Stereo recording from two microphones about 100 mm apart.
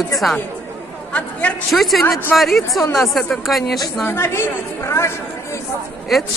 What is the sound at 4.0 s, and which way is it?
A woman's voice, 25° left (ahead or behind).